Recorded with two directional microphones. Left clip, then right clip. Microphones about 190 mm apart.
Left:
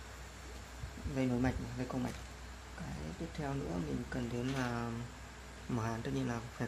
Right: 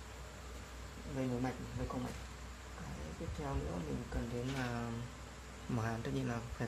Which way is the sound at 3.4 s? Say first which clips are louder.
Left 2 dB; 20° left (ahead or behind).